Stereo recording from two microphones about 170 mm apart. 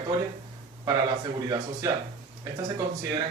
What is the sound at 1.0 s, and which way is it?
Speech, 25° right (ahead or behind).